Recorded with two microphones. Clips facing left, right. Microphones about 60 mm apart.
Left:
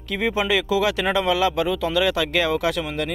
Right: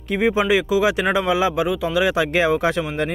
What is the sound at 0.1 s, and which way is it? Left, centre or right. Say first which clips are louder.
Speech: right 4 dB; right.